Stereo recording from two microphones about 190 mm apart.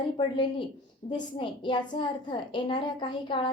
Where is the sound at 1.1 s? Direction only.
25° left (ahead or behind).